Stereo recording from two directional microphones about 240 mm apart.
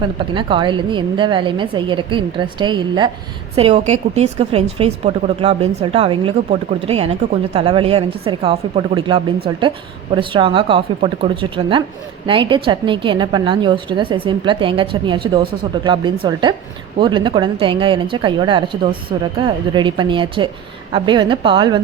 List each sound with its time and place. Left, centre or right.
0.3 s a woman's voice: centre